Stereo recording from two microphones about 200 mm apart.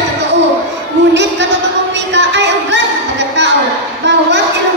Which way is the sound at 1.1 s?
60° right (ahead or behind).